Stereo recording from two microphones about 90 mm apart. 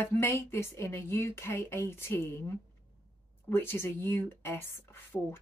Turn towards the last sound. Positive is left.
turn(degrees=25)  # may be behind; listen again after turning